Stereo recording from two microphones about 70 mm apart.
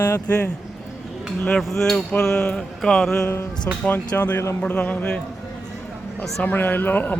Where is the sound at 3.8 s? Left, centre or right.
Left.